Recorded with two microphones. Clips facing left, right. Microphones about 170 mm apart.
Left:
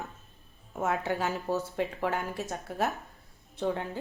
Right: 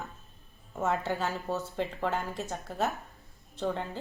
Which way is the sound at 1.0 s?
15° left (ahead or behind).